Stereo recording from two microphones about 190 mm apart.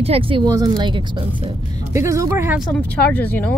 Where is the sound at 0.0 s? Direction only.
30° right (ahead or behind); by 2.7 s 10° right (ahead or behind).